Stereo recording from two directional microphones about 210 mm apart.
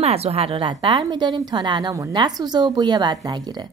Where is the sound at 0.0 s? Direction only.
30° right (ahead or behind).